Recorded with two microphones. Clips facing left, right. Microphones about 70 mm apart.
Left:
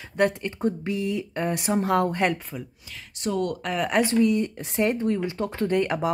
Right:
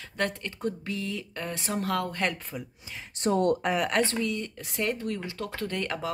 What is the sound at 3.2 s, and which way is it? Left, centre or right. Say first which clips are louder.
Speech: right 2 dB; right.